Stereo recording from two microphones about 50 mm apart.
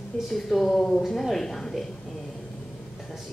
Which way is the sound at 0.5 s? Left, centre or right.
Centre.